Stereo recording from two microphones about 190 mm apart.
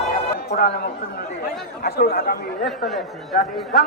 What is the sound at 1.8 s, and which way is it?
Speech, 55° left (ahead or behind).